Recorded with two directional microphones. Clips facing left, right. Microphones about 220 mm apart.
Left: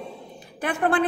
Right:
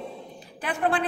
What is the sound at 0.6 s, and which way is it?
Speech, 50° left (ahead or behind).